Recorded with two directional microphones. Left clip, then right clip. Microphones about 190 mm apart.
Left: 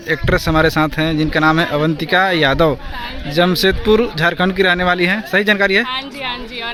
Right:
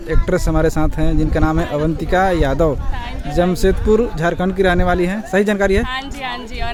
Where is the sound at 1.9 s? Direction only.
10° right (ahead or behind).